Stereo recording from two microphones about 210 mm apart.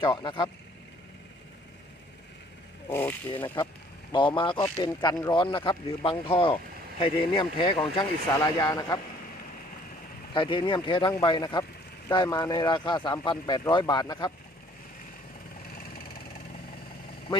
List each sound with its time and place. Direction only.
0.0 s speech: 20° left (ahead or behind)
2.9 s speech: 10° left (ahead or behind)
4.1 s speech: 25° left (ahead or behind)
10.3 s speech: 25° left (ahead or behind)